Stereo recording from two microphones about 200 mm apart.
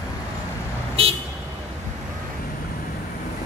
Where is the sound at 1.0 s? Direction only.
30° right (ahead or behind).